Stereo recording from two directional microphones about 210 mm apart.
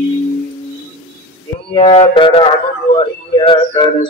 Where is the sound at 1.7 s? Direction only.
25° left (ahead or behind).